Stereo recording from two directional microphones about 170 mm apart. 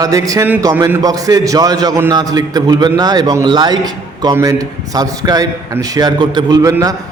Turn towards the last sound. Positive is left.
turn(degrees=-20)  # may be behind; listen again after turning